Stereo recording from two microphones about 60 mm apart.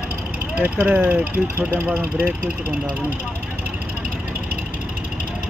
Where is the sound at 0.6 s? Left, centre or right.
Right.